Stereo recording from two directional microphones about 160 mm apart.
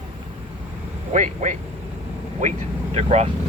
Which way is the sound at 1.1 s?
50° right (ahead or behind).